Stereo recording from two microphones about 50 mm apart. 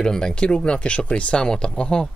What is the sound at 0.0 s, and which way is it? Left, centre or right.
Speech, centre.